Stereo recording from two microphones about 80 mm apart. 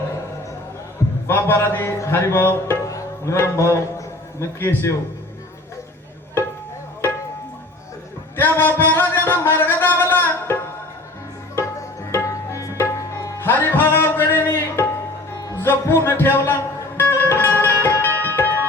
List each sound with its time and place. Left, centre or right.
1.3 s music: left
2.8 s music: left
3.3 s a man's voice: left
8.4 s music: left
12.1 s music: left